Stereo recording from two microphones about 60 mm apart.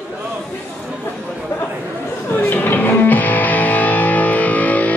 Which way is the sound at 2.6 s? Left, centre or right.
Left.